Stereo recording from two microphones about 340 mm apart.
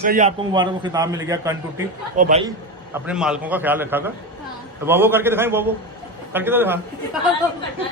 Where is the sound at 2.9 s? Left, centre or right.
Centre.